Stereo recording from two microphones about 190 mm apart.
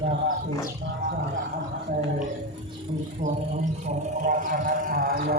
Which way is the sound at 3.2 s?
40° right (ahead or behind).